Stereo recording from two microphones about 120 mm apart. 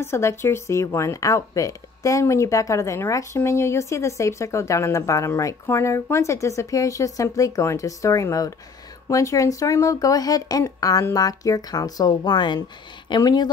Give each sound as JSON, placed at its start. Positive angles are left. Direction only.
{"t": 0.0, "sound": "a woman's voice", "side_deg": 25}